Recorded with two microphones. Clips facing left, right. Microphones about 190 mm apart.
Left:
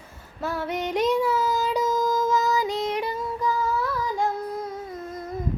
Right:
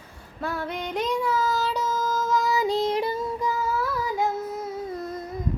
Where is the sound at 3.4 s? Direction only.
10° right (ahead or behind).